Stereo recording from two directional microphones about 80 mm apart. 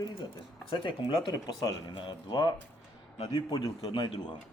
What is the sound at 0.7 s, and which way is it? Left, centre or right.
Speech, left.